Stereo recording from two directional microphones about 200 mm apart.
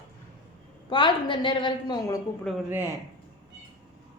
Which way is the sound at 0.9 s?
25° left (ahead or behind).